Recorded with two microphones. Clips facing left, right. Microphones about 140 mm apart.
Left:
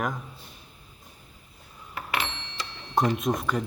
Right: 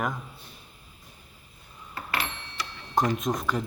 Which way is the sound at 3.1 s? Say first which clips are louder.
Left 1 dB; centre (ahead or behind).